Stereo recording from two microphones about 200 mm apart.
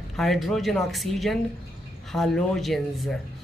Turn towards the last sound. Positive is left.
turn(degrees=0)  # may be behind; listen again after turning